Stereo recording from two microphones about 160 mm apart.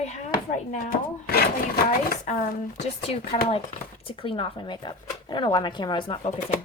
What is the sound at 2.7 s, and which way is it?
Speech, 35° left (ahead or behind).